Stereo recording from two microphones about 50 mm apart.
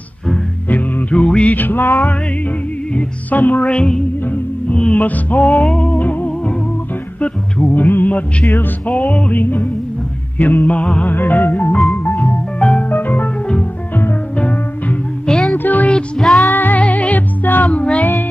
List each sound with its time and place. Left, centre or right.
0.7 s music: left
2.9 s music: left
3.7 s music: centre
4.9 s music: left
11.1 s music: left
12.2 s music: left
12.9 s organ: left
14.4 s music: left
15.2 s music: centre
15.5 s music: left
16.2 s music: centre
16.4 s music: left